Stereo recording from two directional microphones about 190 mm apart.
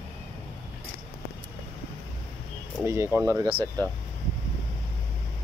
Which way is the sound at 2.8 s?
15° right (ahead or behind).